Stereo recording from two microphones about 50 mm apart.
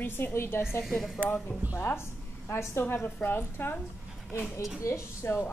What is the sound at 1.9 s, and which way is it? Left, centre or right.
A woman's voice, left.